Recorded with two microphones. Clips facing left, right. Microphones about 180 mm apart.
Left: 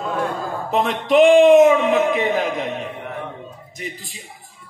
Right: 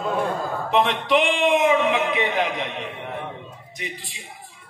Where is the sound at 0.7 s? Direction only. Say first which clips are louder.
Left 2 dB; 45° left (ahead or behind).